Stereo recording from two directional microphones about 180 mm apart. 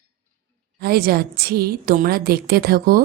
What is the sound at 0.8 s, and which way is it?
A woman's voice, 60° right (ahead or behind).